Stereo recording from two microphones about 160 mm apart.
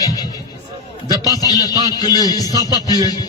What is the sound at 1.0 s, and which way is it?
Music, 20° right (ahead or behind).